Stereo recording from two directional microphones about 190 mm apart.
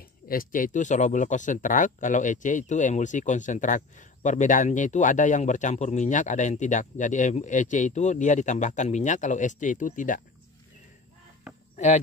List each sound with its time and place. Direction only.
0.3 s speech: 45° left (ahead or behind)
11.7 s cricket: 35° left (ahead or behind)